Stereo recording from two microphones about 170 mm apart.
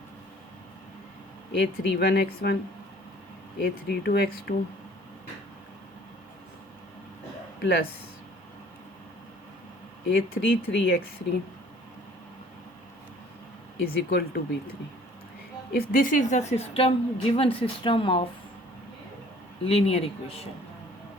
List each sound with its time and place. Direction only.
1.5 s speech: 70° left (ahead or behind)
3.6 s speech: 75° left (ahead or behind)
7.6 s speech: 70° left (ahead or behind)
10.1 s speech: 80° left
13.8 s speech: 70° left (ahead or behind)
15.7 s speech: 55° left (ahead or behind); by 18.3 s 30° left (ahead or behind)
19.6 s speech: 35° left (ahead or behind)